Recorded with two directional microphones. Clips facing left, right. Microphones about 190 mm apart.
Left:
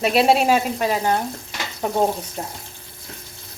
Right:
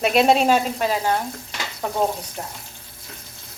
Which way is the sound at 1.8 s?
20° left (ahead or behind).